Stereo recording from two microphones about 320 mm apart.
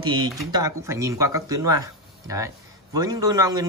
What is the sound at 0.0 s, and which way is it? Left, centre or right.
Speech, centre.